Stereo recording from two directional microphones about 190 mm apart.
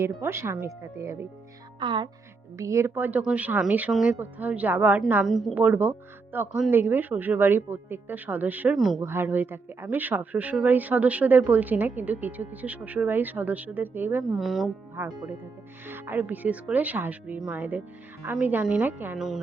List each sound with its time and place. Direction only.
0.0 s speech: 15° right (ahead or behind)